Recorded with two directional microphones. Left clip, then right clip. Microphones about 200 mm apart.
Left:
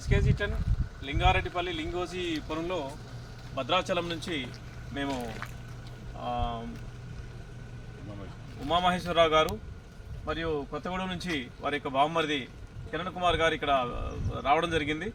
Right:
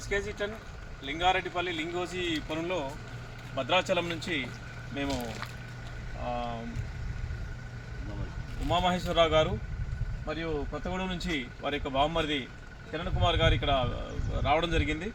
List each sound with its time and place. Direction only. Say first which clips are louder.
0.1 s speech: even; 10° right (ahead or behind)
8.6 s speech: left 1 dB; 15° right (ahead or behind)